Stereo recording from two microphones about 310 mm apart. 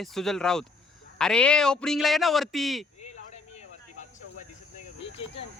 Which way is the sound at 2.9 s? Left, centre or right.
Left.